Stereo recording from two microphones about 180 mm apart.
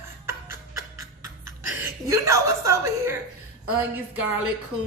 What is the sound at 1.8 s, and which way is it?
A woman's voice, 15° right (ahead or behind).